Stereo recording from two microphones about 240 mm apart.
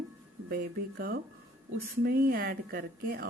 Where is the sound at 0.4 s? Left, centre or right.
Right.